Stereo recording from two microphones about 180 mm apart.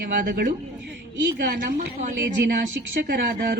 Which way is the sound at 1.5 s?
50° right (ahead or behind).